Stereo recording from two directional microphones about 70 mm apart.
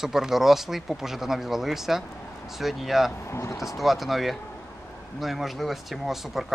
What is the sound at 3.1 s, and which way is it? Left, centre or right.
Speech, left.